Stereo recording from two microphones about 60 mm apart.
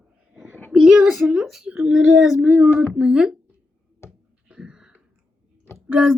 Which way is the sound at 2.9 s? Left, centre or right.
Centre.